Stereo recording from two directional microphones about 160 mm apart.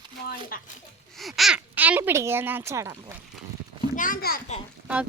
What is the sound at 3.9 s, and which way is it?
Speech, 60° left (ahead or behind).